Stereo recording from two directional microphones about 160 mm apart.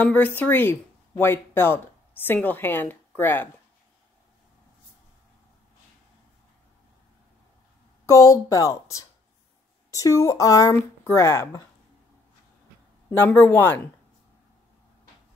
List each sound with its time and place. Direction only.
0.0 s speech: 10° left (ahead or behind)
8.1 s speech: 20° left (ahead or behind)
13.1 s speech: 15° left (ahead or behind)